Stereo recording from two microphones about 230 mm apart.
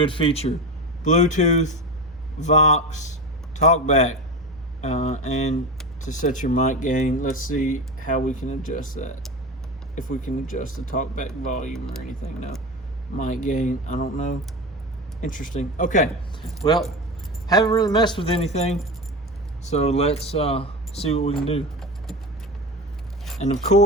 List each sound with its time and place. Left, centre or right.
0.0 s speech: left
13.1 s speech: left
16.6 s speech: centre
23.4 s speech: left